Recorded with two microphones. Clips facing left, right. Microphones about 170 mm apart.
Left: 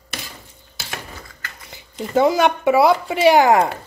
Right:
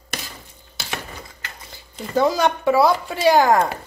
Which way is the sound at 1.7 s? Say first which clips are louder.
Left 4 dB; 20° left (ahead or behind).